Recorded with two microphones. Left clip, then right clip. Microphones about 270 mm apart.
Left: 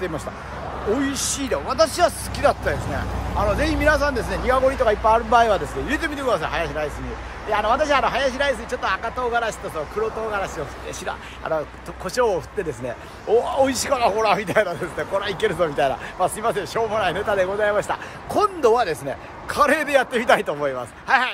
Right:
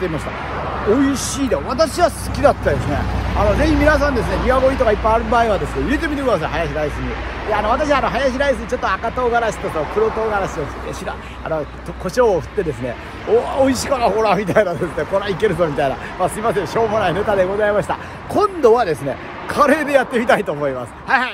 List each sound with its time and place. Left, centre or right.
1.1 s speech: centre
11.1 s speech: centre